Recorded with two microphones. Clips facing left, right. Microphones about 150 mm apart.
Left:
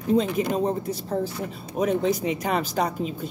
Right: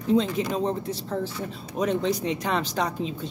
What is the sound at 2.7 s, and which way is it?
Speech, 50° left (ahead or behind).